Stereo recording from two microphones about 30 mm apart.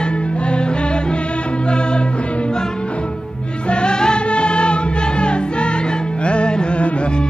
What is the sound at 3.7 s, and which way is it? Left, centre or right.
Music, left.